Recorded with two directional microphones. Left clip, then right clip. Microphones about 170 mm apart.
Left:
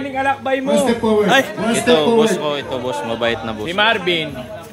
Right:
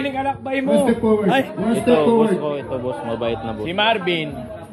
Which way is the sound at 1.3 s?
25° left (ahead or behind).